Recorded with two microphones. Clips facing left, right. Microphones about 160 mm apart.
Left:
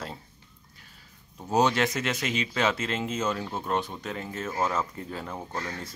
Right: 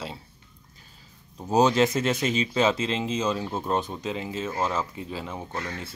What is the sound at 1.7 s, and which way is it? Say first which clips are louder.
Speech: right 5 dB; 30° right (ahead or behind).